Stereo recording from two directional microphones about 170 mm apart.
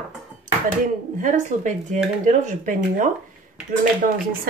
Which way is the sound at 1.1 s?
50° right (ahead or behind).